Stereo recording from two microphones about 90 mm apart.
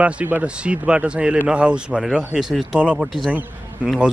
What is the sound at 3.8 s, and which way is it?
Speech, 15° right (ahead or behind).